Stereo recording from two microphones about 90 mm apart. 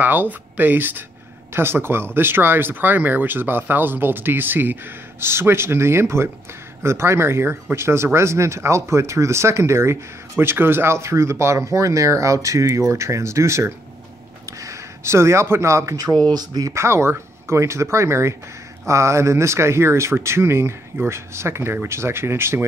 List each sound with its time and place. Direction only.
0.0 s speech: 20° right (ahead or behind); by 16.7 s 45° right (ahead or behind)
16.7 s speech: 30° right (ahead or behind)